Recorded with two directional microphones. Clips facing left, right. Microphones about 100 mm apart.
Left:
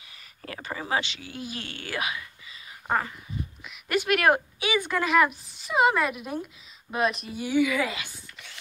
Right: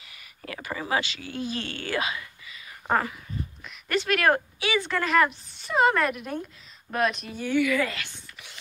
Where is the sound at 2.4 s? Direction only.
30° left (ahead or behind).